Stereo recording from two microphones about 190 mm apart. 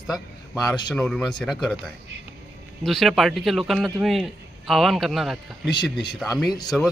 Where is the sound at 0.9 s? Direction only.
5° left (ahead or behind).